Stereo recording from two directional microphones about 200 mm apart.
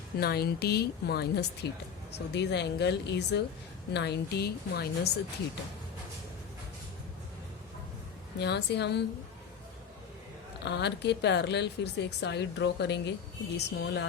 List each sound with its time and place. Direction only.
0.2 s a woman's voice: 50° left (ahead or behind)
8.4 s a woman's voice: 55° left (ahead or behind)
10.6 s a woman's voice: 60° left (ahead or behind)